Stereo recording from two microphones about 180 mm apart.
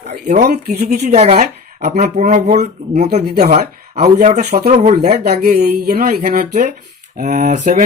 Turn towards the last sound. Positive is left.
turn(degrees=-45)  # may be behind; listen again after turning